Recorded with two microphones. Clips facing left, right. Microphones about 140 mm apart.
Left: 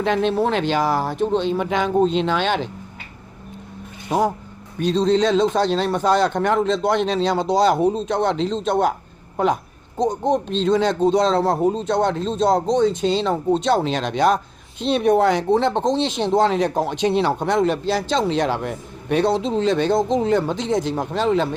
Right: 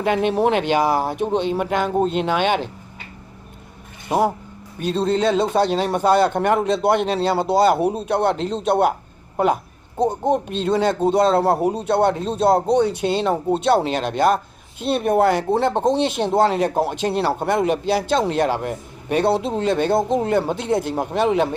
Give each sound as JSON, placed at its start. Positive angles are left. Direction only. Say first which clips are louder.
{"t": 0.0, "sound": "speech", "louder": "right 1 dB", "side_deg": -10}
{"t": 4.8, "sound": "speech", "louder": "left 2 dB", "side_deg": -5}
{"t": 10.0, "sound": "speech", "louder": "even", "side_deg": -10}
{"t": 12.9, "sound": "speech", "louder": "left 1 dB", "side_deg": -60}
{"t": 13.2, "sound": "speech", "louder": "even", "side_deg": -10}